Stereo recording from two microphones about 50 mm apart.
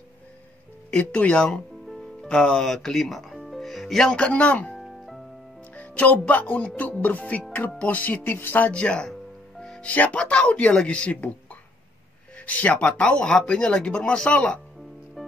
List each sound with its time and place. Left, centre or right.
0.9 s speech: left
2.7 s music: centre
4.2 s speech: left
4.7 s music: centre
5.8 s speech: left
8.6 s speech: left
9.6 s music: centre
9.8 s speech: left
12.4 s speech: left